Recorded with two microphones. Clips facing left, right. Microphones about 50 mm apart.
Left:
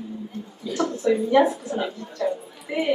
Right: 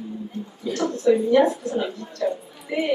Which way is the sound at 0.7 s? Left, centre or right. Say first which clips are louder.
Right 2 dB; right.